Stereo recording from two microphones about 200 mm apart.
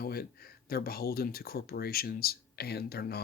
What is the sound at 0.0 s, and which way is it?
Speech, 50° left (ahead or behind).